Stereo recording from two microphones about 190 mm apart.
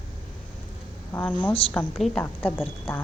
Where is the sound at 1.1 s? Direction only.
10° left (ahead or behind).